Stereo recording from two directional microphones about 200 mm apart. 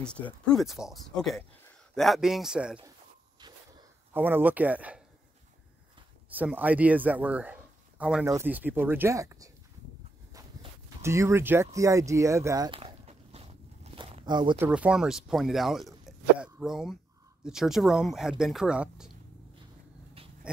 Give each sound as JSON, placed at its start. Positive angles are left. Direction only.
{"t": 0.0, "sound": "speech", "side_deg": 5}
{"t": 4.1, "sound": "speech", "side_deg": -10}
{"t": 6.3, "sound": "speech", "side_deg": -10}
{"t": 10.3, "sound": "a sound", "side_deg": -15}
{"t": 13.9, "sound": "walk", "side_deg": -25}
{"t": 14.6, "sound": "speech", "side_deg": -5}
{"t": 20.2, "sound": "a sound", "side_deg": -30}